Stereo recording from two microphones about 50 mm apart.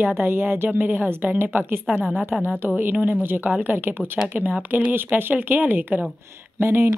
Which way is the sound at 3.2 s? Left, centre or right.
Right.